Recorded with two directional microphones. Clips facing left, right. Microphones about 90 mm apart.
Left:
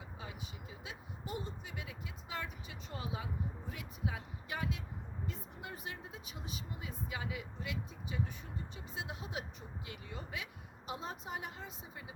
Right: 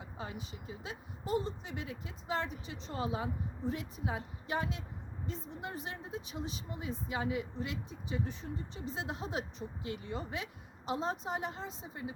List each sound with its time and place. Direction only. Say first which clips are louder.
0.2 s a woman's voice: right 6 dB; 40° right (ahead or behind)